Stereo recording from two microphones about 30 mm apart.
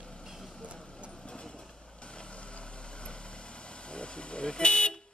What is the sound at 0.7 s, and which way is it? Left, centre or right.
Vehicle, left.